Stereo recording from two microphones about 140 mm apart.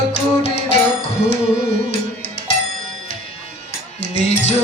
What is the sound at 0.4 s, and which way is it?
Music, 50° left (ahead or behind).